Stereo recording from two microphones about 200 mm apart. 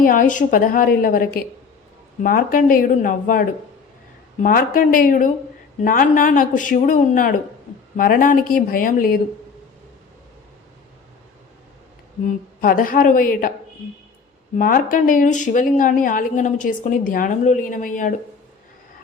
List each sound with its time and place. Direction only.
0.0 s a woman's voice: 45° left (ahead or behind)
12.2 s a woman's voice: 45° left (ahead or behind)
14.5 s speech: 45° left (ahead or behind)